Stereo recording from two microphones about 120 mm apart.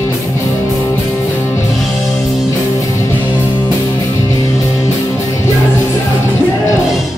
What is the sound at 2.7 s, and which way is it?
Music, 25° left (ahead or behind).